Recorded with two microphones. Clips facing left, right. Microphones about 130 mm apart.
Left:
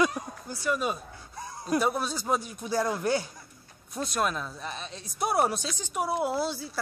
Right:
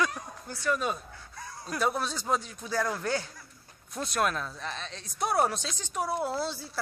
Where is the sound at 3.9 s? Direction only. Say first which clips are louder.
Even; centre (ahead or behind).